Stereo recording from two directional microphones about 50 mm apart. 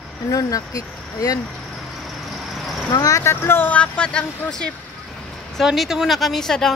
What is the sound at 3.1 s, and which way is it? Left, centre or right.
Speech, left.